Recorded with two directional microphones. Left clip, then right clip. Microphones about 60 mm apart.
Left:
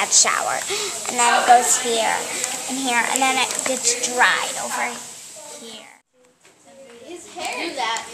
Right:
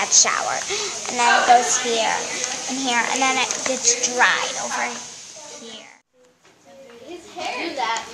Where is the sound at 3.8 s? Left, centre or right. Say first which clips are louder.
Even; centre.